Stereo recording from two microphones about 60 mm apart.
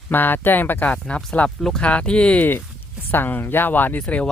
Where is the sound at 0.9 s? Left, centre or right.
Centre.